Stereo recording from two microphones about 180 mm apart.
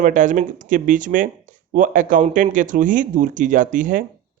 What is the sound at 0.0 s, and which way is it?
Speech, 45° right (ahead or behind).